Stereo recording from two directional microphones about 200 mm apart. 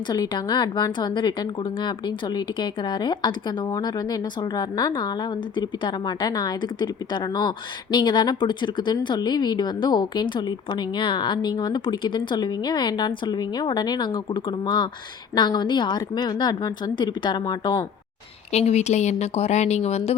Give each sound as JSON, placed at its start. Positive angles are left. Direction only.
{"t": 0.1, "sound": "speech", "side_deg": 20}
{"t": 18.5, "sound": "speech", "side_deg": 35}